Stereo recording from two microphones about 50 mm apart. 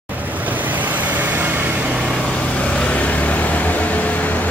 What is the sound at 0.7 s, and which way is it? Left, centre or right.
Vehicle, right.